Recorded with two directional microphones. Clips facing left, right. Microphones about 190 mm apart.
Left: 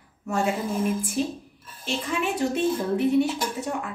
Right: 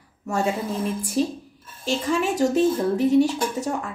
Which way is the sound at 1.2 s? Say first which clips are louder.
Right 4 dB; 35° right (ahead or behind).